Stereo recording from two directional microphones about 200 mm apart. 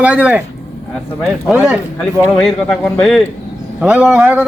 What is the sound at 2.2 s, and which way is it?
A man's voice, 15° left (ahead or behind).